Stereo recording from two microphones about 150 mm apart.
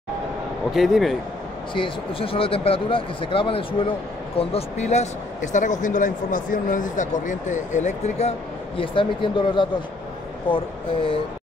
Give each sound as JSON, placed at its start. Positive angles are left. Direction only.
{"t": 0.7, "sound": "speech", "side_deg": 0}
{"t": 1.7, "sound": "speech", "side_deg": 35}